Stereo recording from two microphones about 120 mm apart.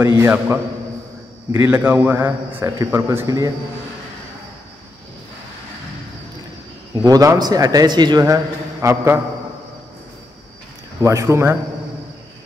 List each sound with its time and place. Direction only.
0.0 s a man's voice: 20° right (ahead or behind)
7.1 s a man's voice: 30° right (ahead or behind)
8.8 s a man's voice: 20° right (ahead or behind)
11.0 s a man's voice: 25° right (ahead or behind)